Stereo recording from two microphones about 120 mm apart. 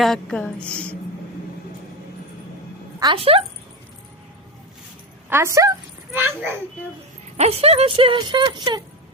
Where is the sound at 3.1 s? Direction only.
50° right (ahead or behind).